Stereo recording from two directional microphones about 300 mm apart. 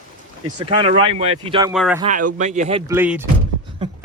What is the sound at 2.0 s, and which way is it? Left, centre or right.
Speech, right.